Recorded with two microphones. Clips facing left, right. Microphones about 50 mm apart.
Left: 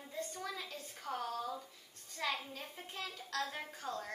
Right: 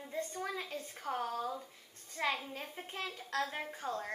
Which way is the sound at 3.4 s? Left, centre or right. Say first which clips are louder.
Right 3 dB; centre.